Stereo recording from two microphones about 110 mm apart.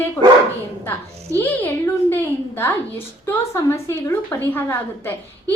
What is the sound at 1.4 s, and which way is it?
Speech, 20° left (ahead or behind).